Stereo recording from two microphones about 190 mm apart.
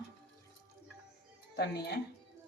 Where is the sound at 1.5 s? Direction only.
60° left (ahead or behind).